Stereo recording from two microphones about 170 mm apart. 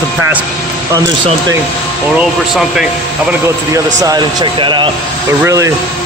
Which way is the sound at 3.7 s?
20° right (ahead or behind).